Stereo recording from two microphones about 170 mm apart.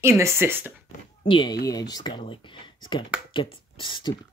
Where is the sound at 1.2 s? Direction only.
30° left (ahead or behind).